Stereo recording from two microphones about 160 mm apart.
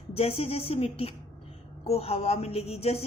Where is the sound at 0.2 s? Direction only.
40° left (ahead or behind).